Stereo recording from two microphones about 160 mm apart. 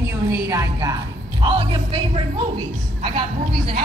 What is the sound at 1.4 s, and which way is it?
Speech, 35° right (ahead or behind).